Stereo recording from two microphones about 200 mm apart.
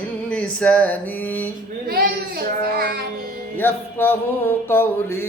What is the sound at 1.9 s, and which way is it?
Child singing, 50° right (ahead or behind).